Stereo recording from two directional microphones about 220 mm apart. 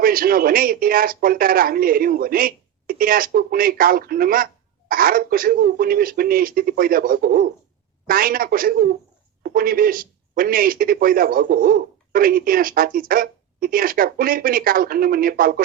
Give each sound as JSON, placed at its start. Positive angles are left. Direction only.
{"t": 0.0, "sound": "speech", "side_deg": -40}